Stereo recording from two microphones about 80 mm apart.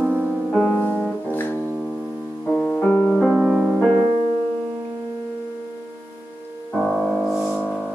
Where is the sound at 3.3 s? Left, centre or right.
Centre.